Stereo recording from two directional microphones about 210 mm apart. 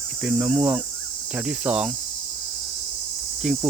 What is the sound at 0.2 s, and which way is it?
Cricket, 5° right (ahead or behind).